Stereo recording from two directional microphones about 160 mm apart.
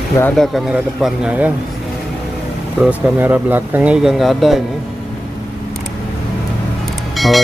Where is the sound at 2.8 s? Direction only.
10° right (ahead or behind).